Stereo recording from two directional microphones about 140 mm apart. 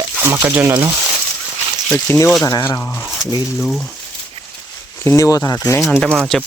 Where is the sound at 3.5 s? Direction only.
Centre (ahead or behind).